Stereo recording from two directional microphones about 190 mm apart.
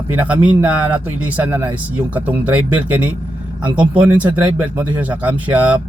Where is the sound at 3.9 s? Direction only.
10° right (ahead or behind).